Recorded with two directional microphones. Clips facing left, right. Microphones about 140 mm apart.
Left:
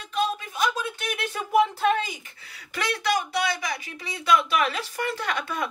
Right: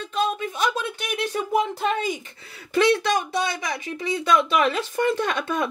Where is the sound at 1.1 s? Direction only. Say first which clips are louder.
Even; 20° right (ahead or behind).